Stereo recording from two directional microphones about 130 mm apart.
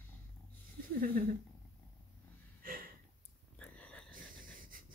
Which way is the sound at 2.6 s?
90° right.